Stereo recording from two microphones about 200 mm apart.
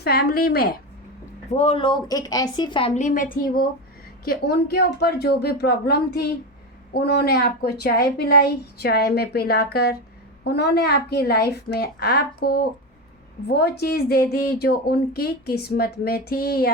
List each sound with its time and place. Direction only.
0.0 s a woman's voice: 50° left (ahead or behind)
1.5 s speech: 30° left (ahead or behind)
2.9 s a woman's voice: 40° left (ahead or behind)